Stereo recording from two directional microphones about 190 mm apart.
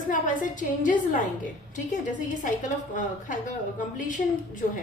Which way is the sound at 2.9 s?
45° left (ahead or behind).